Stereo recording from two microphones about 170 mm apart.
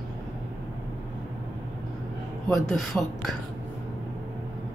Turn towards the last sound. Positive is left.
turn(degrees=0)  # may be behind; listen again after turning